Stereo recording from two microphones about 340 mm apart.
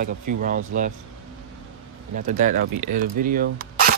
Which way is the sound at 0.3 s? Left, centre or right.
Right.